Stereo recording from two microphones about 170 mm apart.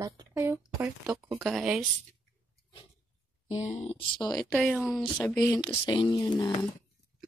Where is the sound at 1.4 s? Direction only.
Centre (ahead or behind).